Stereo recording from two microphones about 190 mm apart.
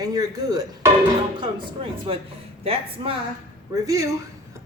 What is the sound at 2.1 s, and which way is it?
Speech, 30° right (ahead or behind).